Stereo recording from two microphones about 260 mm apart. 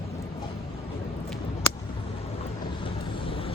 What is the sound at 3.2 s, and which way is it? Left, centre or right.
Vehicle, left.